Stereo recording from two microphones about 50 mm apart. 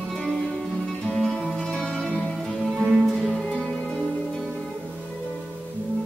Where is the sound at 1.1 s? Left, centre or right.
Centre.